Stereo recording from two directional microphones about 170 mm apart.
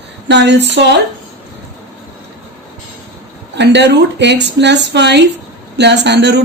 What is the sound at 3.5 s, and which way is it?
A woman's voice, 90° right.